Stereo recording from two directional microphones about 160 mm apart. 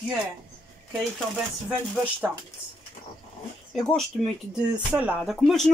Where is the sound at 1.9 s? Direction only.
5° right (ahead or behind).